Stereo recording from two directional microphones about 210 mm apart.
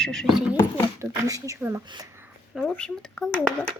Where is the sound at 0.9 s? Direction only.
15° right (ahead or behind).